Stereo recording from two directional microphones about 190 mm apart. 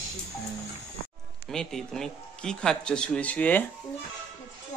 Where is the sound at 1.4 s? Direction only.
Centre (ahead or behind).